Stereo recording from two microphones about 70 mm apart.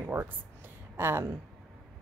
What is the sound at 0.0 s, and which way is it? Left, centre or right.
Speech, right.